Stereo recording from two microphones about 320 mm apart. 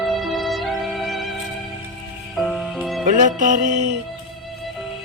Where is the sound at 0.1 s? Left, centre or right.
Centre.